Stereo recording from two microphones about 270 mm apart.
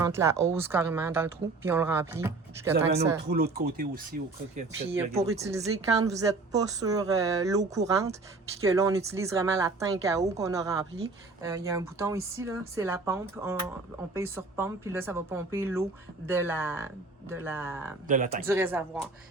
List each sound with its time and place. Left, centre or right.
0.0 s speech: centre
3.2 s speech: right
5.0 s speech: right
5.3 s speech: centre
18.1 s speech: right
18.4 s speech: centre